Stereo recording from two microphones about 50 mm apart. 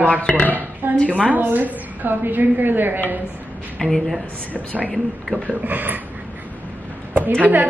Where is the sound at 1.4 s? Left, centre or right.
Right.